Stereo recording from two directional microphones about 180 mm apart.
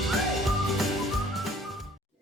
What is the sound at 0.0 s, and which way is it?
Whistling, centre (ahead or behind).